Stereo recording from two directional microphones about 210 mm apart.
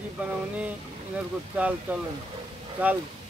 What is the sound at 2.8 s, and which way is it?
Speech, 5° right (ahead or behind).